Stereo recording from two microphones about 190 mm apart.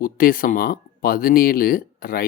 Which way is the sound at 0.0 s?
50° left (ahead or behind).